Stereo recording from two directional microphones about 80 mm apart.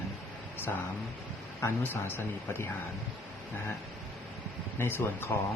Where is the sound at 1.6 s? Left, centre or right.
Left.